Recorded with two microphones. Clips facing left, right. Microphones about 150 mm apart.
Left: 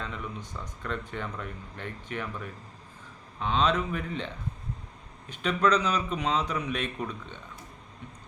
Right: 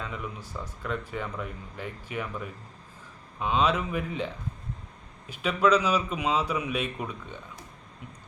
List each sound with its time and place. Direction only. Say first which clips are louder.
0.0 s a man's voice: right 1 dB; 5° right (ahead or behind)
5.3 s a man's voice: right 2 dB; 5° right (ahead or behind)